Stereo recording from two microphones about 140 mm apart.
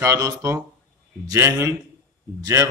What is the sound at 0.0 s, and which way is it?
A man's voice, 20° right (ahead or behind).